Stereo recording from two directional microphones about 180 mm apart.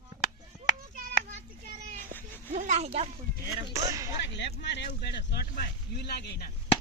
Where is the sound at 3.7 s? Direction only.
20° right (ahead or behind).